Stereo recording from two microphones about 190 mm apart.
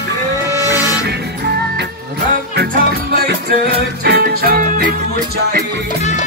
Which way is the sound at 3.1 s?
55° right (ahead or behind).